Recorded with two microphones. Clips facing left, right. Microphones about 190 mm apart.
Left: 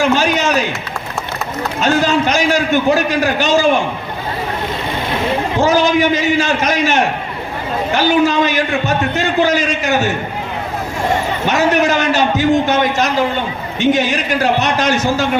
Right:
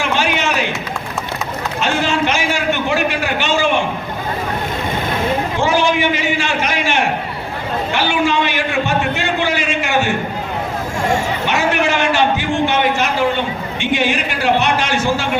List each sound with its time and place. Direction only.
0.0 s run: 40° left (ahead or behind)
1.8 s a sound: 40° left (ahead or behind)
5.5 s a man's voice: 40° left (ahead or behind)
11.4 s a man's voice: 40° left (ahead or behind)